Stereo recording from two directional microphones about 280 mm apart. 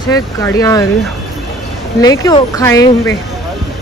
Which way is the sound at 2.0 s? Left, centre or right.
Centre.